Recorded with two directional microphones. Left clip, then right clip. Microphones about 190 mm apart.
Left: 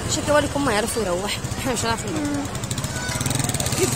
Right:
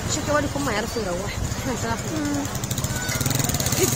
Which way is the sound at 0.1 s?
40° left (ahead or behind).